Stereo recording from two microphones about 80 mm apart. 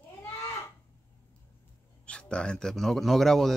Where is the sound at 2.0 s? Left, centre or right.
Centre.